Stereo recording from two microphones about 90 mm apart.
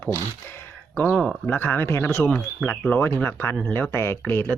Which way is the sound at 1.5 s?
25° left (ahead or behind).